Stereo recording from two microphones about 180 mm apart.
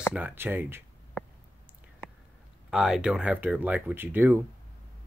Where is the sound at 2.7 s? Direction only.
5° right (ahead or behind).